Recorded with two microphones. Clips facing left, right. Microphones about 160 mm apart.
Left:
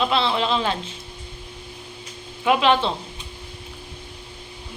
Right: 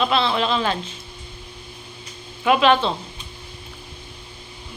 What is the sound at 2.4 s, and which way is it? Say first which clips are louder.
Speech: right 2 dB; 20° left (ahead or behind).